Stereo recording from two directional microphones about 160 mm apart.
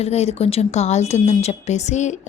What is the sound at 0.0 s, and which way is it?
Speech, 40° left (ahead or behind).